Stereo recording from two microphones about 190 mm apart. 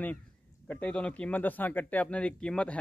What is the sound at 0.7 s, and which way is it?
Speech, 5° left (ahead or behind).